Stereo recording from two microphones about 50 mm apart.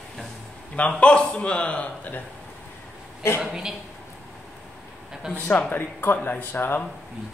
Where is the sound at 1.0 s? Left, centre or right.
Left.